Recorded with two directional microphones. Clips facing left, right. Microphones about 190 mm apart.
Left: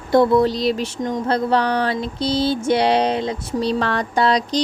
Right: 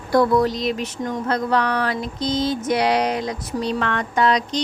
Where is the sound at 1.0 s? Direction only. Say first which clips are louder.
Left 3 dB; 25° left (ahead or behind).